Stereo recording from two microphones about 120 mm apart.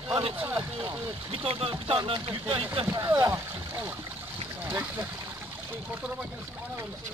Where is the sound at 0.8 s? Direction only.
50° right (ahead or behind).